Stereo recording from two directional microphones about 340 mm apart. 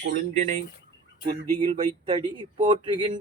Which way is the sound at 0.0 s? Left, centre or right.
Right.